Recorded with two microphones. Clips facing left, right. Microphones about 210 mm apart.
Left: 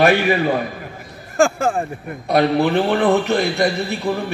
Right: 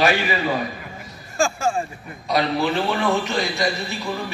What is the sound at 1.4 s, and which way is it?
A man's voice, 60° left (ahead or behind).